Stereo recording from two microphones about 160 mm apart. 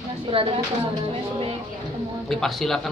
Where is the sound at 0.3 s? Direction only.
35° right (ahead or behind).